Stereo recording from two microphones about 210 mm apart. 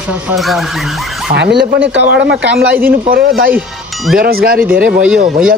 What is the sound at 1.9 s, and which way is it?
Speech, 55° right (ahead or behind).